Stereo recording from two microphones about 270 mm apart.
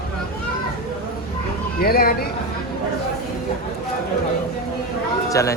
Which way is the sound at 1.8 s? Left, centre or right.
Left.